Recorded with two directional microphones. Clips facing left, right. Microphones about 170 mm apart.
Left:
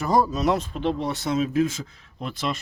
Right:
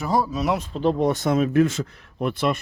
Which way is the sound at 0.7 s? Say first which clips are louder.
Right 5 dB; 40° right (ahead or behind).